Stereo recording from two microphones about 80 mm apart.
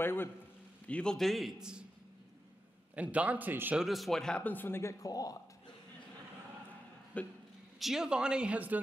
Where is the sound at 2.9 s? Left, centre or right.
Centre.